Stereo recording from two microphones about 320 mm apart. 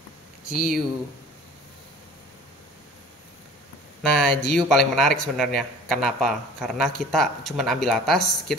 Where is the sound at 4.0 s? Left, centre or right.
Centre.